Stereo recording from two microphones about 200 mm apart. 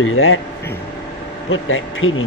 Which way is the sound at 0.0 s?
90° left.